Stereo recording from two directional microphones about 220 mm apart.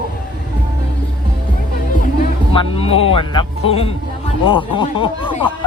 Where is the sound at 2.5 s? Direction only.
25° left (ahead or behind).